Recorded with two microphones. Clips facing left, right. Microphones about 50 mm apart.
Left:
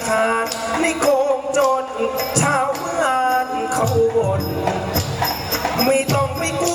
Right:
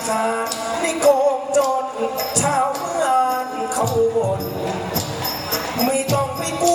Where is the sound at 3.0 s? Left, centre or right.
Left.